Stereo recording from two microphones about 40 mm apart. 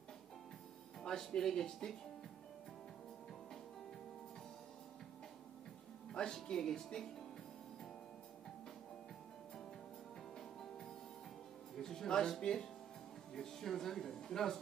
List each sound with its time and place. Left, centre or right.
1.0 s speech: centre
6.1 s speech: centre
10.3 s music: centre
12.4 s speech: centre